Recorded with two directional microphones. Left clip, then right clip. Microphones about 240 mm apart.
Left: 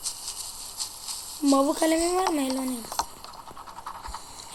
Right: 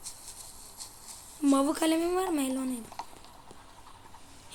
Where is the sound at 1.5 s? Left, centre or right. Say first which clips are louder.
Left 4 dB; centre.